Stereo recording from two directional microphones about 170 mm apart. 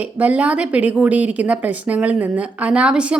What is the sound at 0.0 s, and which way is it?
A woman's voice, 10° right (ahead or behind).